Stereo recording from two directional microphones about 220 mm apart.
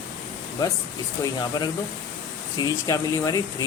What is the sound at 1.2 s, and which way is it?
Speech, 20° left (ahead or behind).